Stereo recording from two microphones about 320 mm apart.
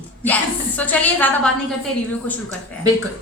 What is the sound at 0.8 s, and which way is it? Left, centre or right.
Speech, centre.